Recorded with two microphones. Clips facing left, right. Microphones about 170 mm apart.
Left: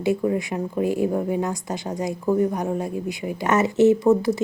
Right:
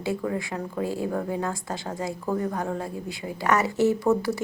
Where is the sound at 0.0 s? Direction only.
20° left (ahead or behind).